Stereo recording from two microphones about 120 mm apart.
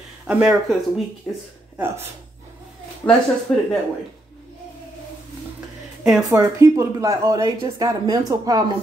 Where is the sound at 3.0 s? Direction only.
15° left (ahead or behind).